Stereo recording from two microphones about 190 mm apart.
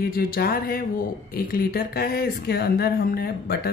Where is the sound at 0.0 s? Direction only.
50° left (ahead or behind).